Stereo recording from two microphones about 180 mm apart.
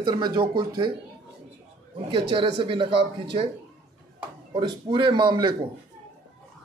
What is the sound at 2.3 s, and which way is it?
Speech, 30° right (ahead or behind).